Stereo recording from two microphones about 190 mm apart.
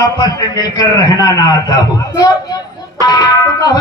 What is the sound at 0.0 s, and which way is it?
Speech, 20° left (ahead or behind).